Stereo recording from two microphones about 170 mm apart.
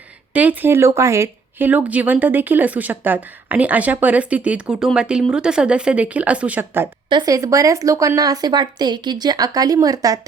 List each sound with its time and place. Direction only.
0.3 s speech: 10° right (ahead or behind)
7.1 s a woman's voice: 25° right (ahead or behind)